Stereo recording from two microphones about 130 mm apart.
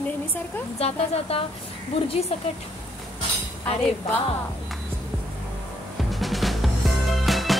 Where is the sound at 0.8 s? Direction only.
50° left (ahead or behind).